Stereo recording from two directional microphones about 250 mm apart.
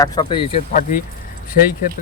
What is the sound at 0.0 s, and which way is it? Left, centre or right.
Speech, centre.